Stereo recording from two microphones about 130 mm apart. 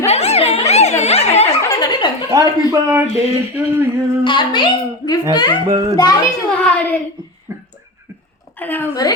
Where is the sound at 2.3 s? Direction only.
25° right (ahead or behind).